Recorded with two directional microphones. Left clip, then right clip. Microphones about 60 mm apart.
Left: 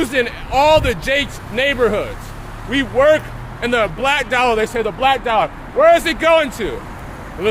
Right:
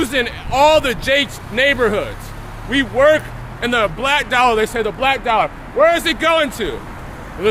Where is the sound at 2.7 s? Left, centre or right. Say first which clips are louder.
Even; right.